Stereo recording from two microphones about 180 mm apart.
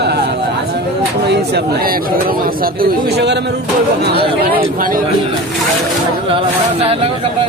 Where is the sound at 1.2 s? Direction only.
70° right (ahead or behind).